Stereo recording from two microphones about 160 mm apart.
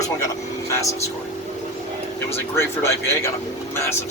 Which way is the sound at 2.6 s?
15° left (ahead or behind).